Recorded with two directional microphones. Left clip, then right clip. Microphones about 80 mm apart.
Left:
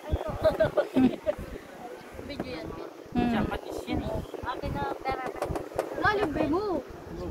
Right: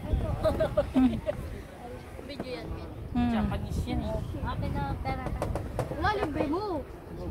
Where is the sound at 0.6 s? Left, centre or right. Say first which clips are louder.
Left 2 dB; right.